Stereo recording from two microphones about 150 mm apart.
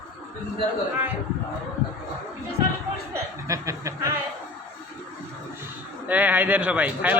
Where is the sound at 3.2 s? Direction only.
20° right (ahead or behind).